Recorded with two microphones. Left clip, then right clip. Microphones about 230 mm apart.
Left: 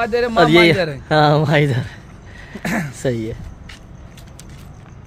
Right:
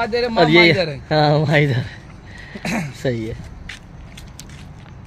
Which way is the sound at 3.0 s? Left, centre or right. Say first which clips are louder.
Left 1 dB; centre.